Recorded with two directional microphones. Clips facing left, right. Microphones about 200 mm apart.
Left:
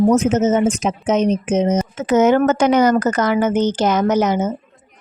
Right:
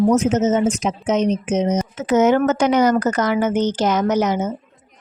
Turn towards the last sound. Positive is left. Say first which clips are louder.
# left 2 dB
turn(degrees=50)  # may be behind; listen again after turning